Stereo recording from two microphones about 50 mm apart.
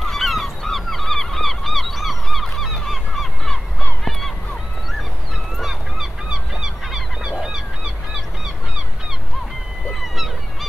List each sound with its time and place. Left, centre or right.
0.0 s goose: centre
3.8 s honk: centre
5.6 s goose: centre
7.4 s honk: centre
10.0 s honk: centre